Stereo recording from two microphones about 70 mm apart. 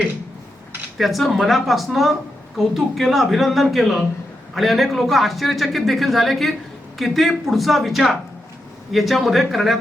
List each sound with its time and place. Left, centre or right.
0.9 s a man's voice: centre